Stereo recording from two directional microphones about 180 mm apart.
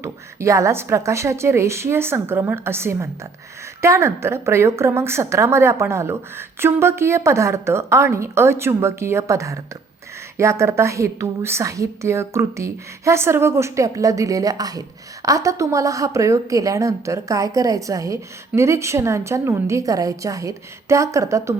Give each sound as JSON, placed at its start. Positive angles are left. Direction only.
{"t": 0.0, "sound": "a woman's voice", "side_deg": -15}